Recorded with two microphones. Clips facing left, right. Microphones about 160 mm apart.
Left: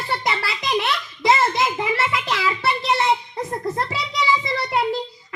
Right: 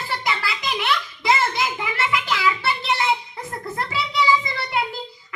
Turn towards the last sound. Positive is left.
turn(degrees=35)  # may be behind; listen again after turning